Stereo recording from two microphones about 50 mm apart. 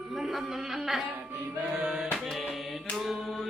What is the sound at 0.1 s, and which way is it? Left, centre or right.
Speech, centre.